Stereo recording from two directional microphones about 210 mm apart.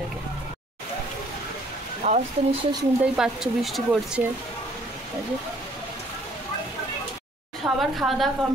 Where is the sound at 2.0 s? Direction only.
30° right (ahead or behind).